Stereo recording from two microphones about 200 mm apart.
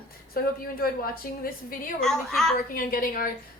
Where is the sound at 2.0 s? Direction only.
Centre (ahead or behind).